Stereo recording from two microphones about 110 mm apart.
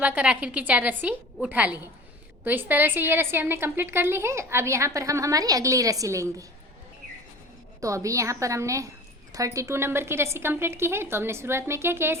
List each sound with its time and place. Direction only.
0.0 s a woman's voice: 10° right (ahead or behind); by 6.4 s 30° right (ahead or behind)
7.8 s a woman's voice: 30° right (ahead or behind)